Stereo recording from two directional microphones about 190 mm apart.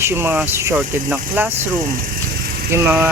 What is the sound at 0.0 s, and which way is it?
Speech, 10° right (ahead or behind).